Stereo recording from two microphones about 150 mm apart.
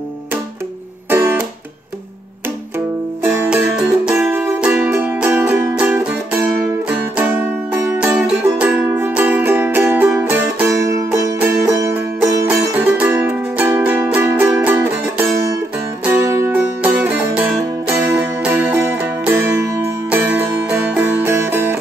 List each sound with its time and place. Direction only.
1.1 s music: 15° right (ahead or behind)
3.4 s music: 5° right (ahead or behind)